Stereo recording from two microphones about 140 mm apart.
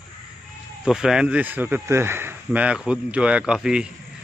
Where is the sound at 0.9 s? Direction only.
5° right (ahead or behind).